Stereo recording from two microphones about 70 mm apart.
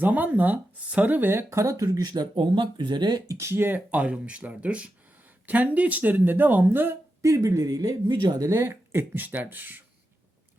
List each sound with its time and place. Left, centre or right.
0.0 s speech: right
2.7 s speech: right
3.2 s speech: right
3.9 s speech: centre
7.2 s speech: right
8.4 s speech: right
9.2 s speech: right